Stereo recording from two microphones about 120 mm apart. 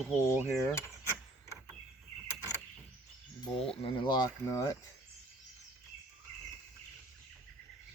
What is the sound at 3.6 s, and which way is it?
Speech, 50° left (ahead or behind).